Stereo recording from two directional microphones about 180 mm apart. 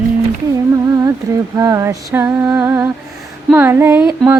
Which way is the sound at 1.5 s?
15° right (ahead or behind).